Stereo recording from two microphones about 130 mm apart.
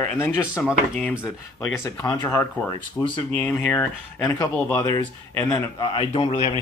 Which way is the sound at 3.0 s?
5° left (ahead or behind).